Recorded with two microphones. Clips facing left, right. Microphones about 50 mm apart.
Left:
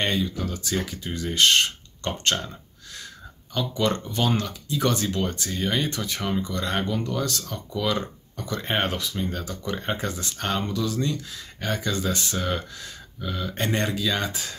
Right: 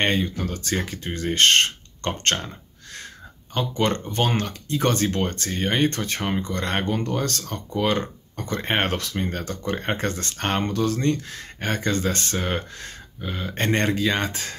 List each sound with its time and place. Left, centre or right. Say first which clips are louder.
0.0 s speech: right 3 dB; right
8.8 s speech: right 2 dB; right
10.3 s speech: right 2 dB; right